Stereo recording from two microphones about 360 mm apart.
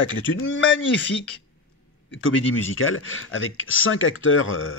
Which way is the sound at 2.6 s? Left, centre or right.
Left.